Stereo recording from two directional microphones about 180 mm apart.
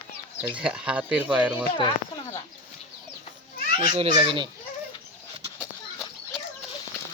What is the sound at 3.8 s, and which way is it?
Speech, 30° right (ahead or behind).